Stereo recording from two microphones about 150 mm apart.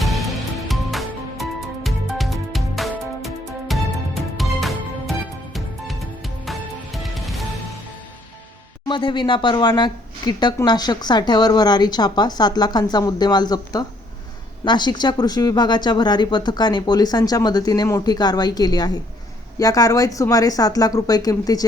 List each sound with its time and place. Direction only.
0.0 s music: centre (ahead or behind)
6.4 s music: centre (ahead or behind)
8.9 s speech: 35° left (ahead or behind)